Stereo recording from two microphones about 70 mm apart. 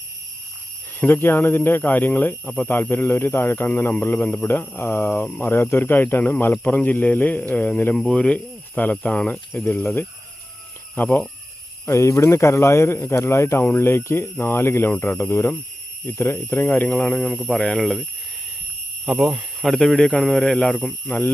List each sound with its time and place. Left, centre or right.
0.9 s speech: left
7.9 s speech: centre
8.2 s speech: left
11.9 s speech: left
17.0 s speech: centre
19.0 s speech: centre
19.6 s a man's voice: centre
21.1 s speech: left